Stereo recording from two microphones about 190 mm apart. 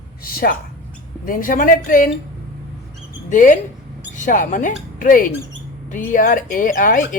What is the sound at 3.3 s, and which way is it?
Speech, 45° left (ahead or behind).